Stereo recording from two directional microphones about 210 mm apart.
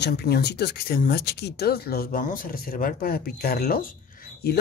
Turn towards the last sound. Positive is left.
turn(degrees=45)  # may be behind; listen again after turning